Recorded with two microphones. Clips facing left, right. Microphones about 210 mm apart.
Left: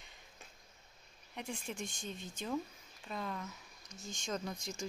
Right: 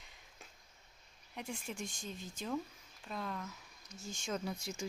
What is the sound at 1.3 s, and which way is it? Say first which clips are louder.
Speech: left 1 dB; centre (ahead or behind).